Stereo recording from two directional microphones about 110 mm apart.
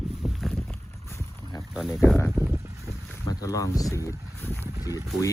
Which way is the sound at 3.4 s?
30° left (ahead or behind).